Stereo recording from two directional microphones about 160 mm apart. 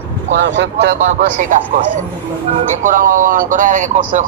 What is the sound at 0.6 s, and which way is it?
Speech, 90° right.